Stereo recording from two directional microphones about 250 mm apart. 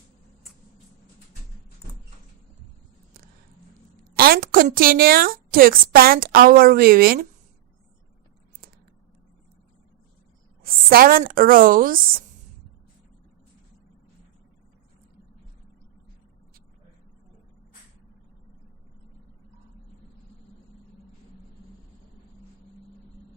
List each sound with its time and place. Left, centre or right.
4.1 s a woman's voice: right
10.6 s a woman's voice: right